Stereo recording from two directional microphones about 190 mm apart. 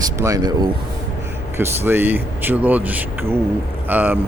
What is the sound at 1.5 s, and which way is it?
Speech, 10° right (ahead or behind).